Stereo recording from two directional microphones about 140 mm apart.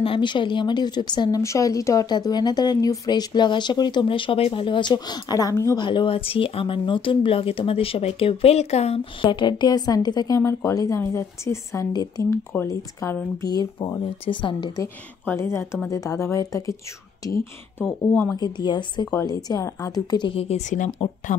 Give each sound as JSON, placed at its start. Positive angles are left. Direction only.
{"t": 0.0, "sound": "speech", "side_deg": 35}
{"t": 5.8, "sound": "speech", "side_deg": 35}
{"t": 14.2, "sound": "speech", "side_deg": 35}
{"t": 15.2, "sound": "speech", "side_deg": 20}
{"t": 18.3, "sound": "speech", "side_deg": 30}